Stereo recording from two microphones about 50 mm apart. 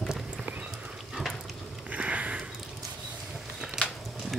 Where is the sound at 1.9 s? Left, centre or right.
Right.